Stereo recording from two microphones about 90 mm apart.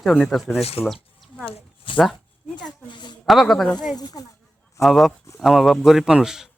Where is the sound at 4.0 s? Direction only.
45° left (ahead or behind).